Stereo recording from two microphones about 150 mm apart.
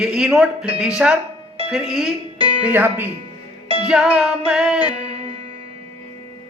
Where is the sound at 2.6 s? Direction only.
10° right (ahead or behind).